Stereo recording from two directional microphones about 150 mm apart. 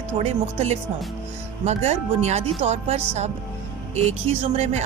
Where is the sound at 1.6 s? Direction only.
45° right (ahead or behind).